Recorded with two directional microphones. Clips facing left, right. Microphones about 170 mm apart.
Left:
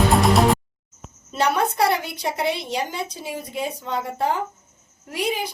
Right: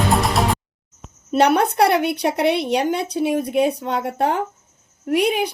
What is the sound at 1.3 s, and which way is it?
A woman's voice, 65° right (ahead or behind).